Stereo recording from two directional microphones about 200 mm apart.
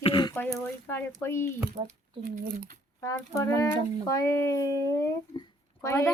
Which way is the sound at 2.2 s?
45° right (ahead or behind).